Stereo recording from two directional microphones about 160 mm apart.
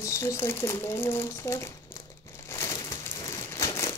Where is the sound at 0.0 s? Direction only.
20° left (ahead or behind).